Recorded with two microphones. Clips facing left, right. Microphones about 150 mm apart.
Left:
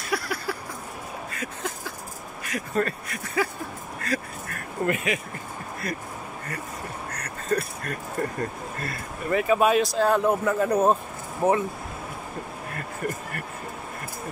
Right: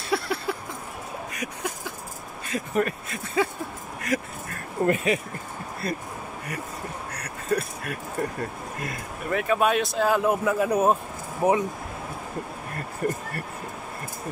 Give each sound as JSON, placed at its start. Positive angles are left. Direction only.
{"t": 0.1, "sound": "a sound", "side_deg": -25}
{"t": 2.4, "sound": "speech", "side_deg": -20}
{"t": 4.0, "sound": "a sound", "side_deg": -20}
{"t": 4.8, "sound": "speech", "side_deg": -35}
{"t": 7.2, "sound": "speech", "side_deg": -10}
{"t": 9.3, "sound": "speech", "side_deg": 0}
{"t": 13.0, "sound": "speech", "side_deg": -35}